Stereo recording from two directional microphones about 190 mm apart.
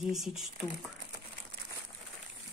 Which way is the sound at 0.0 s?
Centre (ahead or behind).